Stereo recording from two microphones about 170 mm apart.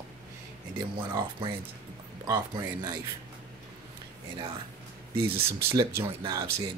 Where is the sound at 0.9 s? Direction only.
30° right (ahead or behind).